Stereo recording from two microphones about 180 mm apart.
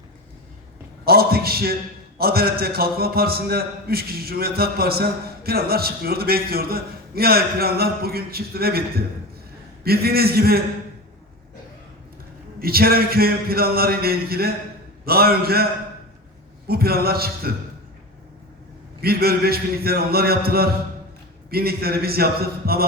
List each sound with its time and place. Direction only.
1.0 s a sound: 60° right (ahead or behind)
2.1 s a man's voice: 60° right (ahead or behind)
12.5 s a man's voice: 55° right (ahead or behind)
16.6 s a man's voice: 60° right (ahead or behind)
19.0 s a man's voice: 60° right (ahead or behind)